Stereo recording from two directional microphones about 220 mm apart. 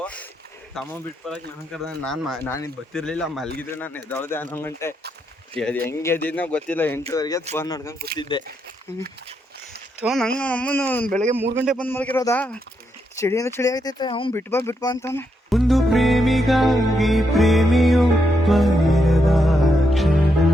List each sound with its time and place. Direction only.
0.0 s a sound: 5° left (ahead or behind)
0.7 s speech: centre (ahead or behind)
7.9 s speech: 40° right (ahead or behind)
8.2 s speech: 20° left (ahead or behind)
10.0 s speech: centre (ahead or behind)
11.9 s speech: 10° left (ahead or behind)
14.3 s speech: 10° left (ahead or behind)
15.4 s music: centre (ahead or behind)